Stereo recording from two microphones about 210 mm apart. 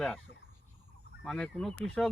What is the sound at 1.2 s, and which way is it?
Speech, 5° left (ahead or behind).